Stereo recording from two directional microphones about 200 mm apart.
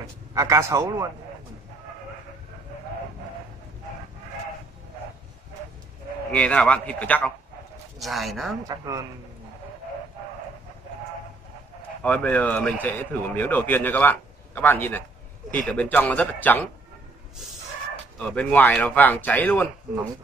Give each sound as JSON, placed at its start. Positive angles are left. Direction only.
{"t": 0.0, "sound": "a man's voice", "side_deg": -15}
{"t": 6.3, "sound": "a man's voice", "side_deg": 5}
{"t": 8.6, "sound": "a man's voice", "side_deg": -15}
{"t": 12.0, "sound": "a man's voice", "side_deg": 5}
{"t": 18.2, "sound": "a man's voice", "side_deg": 5}